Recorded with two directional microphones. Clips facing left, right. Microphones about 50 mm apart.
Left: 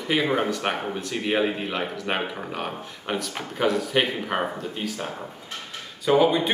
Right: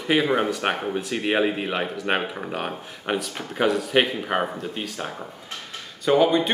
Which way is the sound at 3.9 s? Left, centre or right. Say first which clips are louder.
Right 2 dB; right.